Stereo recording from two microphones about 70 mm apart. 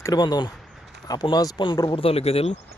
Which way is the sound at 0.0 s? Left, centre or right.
Left.